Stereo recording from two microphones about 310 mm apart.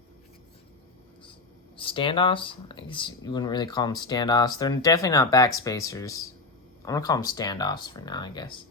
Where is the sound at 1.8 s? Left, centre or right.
Centre.